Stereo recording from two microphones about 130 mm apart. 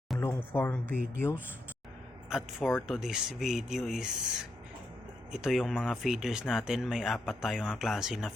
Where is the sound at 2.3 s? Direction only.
5° right (ahead or behind).